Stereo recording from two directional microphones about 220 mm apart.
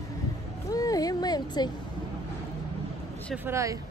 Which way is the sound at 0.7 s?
15° left (ahead or behind).